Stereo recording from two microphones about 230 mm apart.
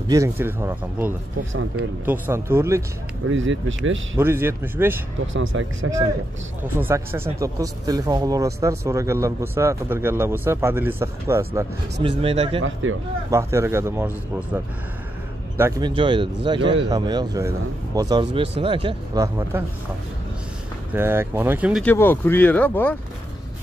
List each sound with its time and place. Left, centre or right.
0.1 s speech: centre
1.5 s speech: right
2.0 s speech: centre
3.3 s speech: right
4.2 s speech: centre
5.2 s speech: right
6.8 s speech: centre
12.0 s speech: right
13.3 s speech: centre
15.9 s speech: right
20.9 s speech: centre
21.8 s speech: centre